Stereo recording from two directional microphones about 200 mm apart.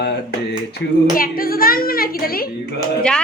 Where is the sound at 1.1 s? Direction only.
45° left (ahead or behind).